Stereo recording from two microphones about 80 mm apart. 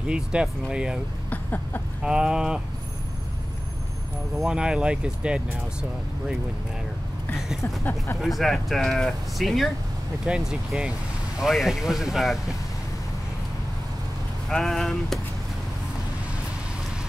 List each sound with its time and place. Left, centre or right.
0.0 s speech: centre
1.3 s a sound: left
2.0 s speech: centre
4.4 s speech: centre
7.6 s speech: left
8.2 s speech: centre
10.2 s speech: centre
14.5 s speech: centre